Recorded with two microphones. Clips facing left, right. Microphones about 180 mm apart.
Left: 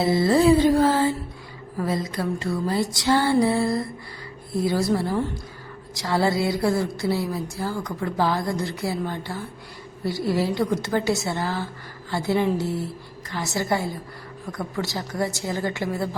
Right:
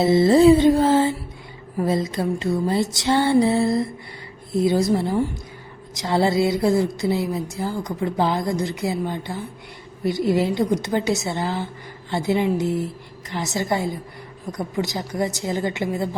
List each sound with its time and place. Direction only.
0.0 s a woman's voice: 25° right (ahead or behind)